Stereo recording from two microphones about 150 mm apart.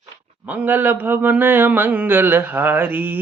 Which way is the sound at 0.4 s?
10° right (ahead or behind).